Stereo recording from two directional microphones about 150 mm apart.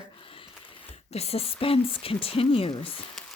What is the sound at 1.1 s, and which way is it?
Speech, 45° left (ahead or behind).